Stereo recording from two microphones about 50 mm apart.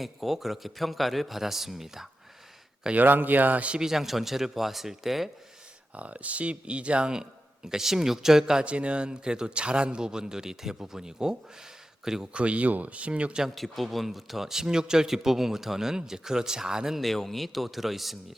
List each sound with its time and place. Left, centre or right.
0.0 s speech: centre
2.9 s speech: right
3.8 s speech: centre
5.9 s speech: right; by 8.6 s centre
8.6 s speech: right
12.3 s speech: right
13.6 s speech: centre
17.0 s speech: centre